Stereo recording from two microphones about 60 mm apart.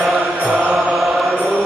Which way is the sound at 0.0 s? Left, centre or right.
Centre.